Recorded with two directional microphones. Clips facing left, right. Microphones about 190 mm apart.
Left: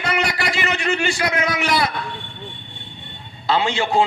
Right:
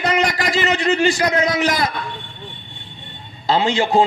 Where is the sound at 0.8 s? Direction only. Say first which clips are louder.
Right 5 dB; 35° right (ahead or behind).